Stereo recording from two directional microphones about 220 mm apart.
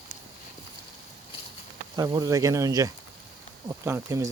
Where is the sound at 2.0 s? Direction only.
15° right (ahead or behind).